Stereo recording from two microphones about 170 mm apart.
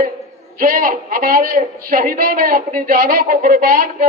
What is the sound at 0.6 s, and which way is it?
A woman's voice, 55° right (ahead or behind).